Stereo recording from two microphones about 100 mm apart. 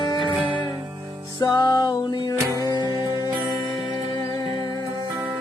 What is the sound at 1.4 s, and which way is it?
Music, 40° left (ahead or behind).